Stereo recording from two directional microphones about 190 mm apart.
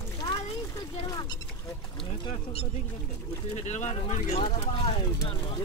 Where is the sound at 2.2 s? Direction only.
30° left (ahead or behind).